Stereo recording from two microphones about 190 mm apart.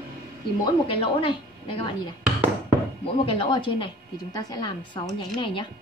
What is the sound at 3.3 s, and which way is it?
Speech, 25° left (ahead or behind).